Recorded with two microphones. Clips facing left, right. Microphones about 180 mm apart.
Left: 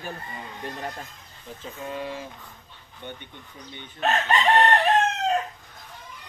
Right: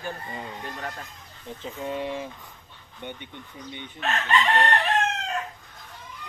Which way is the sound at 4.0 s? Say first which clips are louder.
Left 2 dB; 40° left (ahead or behind).